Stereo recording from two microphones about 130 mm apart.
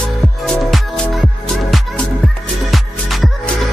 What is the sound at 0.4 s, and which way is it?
Music, centre (ahead or behind).